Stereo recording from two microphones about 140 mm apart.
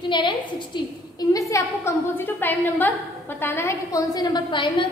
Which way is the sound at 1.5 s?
20° left (ahead or behind).